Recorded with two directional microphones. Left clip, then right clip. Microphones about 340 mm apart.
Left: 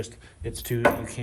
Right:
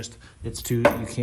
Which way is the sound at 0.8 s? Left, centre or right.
Centre.